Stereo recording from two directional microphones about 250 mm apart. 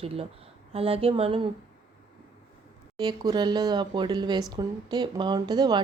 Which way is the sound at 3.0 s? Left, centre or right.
Centre.